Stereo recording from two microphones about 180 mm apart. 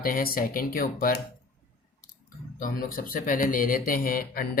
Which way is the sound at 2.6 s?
50° left (ahead or behind).